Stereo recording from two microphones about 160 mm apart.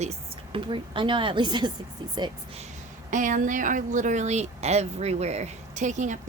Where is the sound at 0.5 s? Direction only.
30° right (ahead or behind).